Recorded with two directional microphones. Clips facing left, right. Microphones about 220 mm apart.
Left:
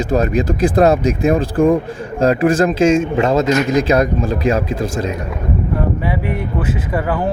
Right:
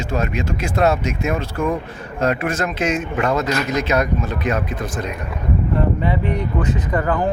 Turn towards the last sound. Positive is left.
turn(degrees=5)  # may be behind; listen again after turning